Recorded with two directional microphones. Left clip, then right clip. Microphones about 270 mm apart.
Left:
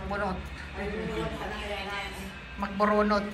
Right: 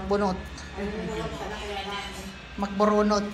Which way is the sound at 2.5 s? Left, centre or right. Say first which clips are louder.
Right 2 dB; centre.